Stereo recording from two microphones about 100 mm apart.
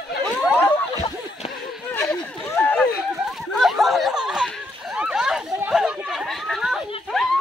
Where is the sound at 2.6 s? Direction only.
15° left (ahead or behind).